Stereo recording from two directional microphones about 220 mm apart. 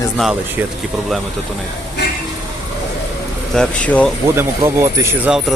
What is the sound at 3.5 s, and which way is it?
Speech, 5° left (ahead or behind).